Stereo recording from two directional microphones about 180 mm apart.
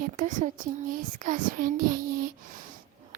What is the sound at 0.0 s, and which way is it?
Speech, 45° right (ahead or behind).